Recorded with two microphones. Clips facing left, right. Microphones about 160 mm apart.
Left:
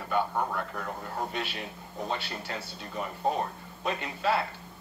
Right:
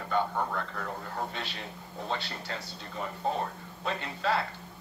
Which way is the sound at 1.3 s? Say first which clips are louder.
Left 4 dB; 15° left (ahead or behind).